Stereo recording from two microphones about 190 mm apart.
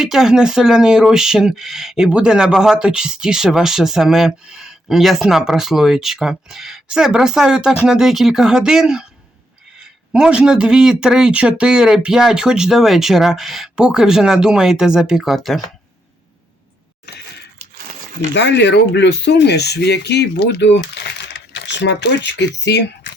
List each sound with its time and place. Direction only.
0.0 s speech: centre (ahead or behind)
18.3 s speech: 65° left (ahead or behind)
23.1 s a sound: 65° left (ahead or behind)